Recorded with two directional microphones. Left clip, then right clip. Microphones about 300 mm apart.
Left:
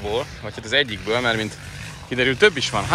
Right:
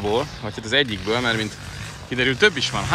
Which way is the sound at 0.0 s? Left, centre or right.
Centre.